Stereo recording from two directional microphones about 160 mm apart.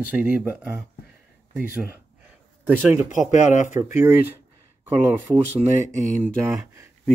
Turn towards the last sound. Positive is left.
turn(degrees=-15)  # may be behind; listen again after turning